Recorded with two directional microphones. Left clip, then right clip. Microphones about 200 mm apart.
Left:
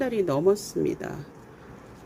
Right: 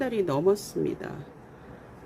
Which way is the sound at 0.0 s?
20° left (ahead or behind).